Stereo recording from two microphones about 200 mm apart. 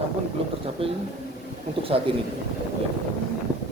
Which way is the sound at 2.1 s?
25° right (ahead or behind).